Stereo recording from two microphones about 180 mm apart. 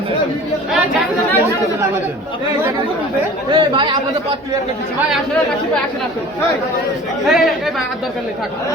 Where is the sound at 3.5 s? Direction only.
25° right (ahead or behind).